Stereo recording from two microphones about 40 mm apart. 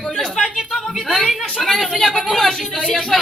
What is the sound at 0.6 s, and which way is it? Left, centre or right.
A woman's voice, centre.